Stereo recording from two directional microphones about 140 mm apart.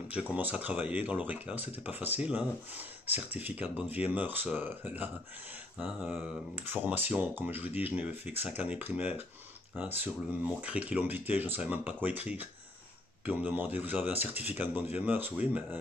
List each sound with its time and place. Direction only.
0.1 s speech: 10° right (ahead or behind)